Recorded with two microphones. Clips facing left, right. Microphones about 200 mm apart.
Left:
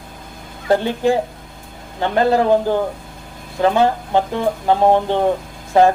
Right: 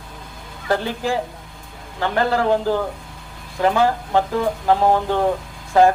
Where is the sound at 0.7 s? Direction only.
25° left (ahead or behind).